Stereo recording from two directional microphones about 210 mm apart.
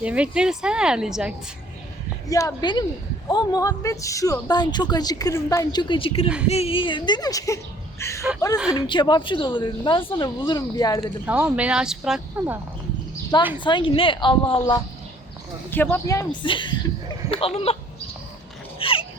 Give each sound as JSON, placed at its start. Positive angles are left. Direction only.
{"t": 0.0, "sound": "speech", "side_deg": -5}
{"t": 2.2, "sound": "speech", "side_deg": 15}
{"t": 8.5, "sound": "speech", "side_deg": -5}
{"t": 8.9, "sound": "speech", "side_deg": 20}
{"t": 11.3, "sound": "speech", "side_deg": -5}
{"t": 13.3, "sound": "speech", "side_deg": 20}
{"t": 15.7, "sound": "speech", "side_deg": 10}
{"t": 18.8, "sound": "a sound", "side_deg": 25}